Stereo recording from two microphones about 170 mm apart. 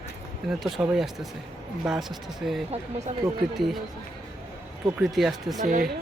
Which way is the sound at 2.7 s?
40° right (ahead or behind).